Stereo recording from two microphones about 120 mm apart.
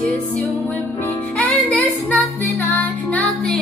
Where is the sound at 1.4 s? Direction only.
10° left (ahead or behind).